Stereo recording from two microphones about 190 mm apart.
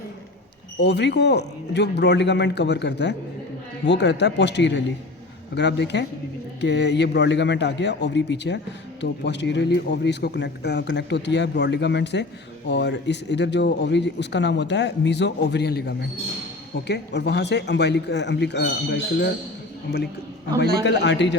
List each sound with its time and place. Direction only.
0.8 s a man's voice: 65° left (ahead or behind)
20.8 s a man's voice: 65° left (ahead or behind)